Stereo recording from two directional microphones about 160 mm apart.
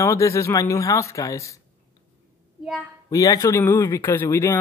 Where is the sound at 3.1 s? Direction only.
20° left (ahead or behind).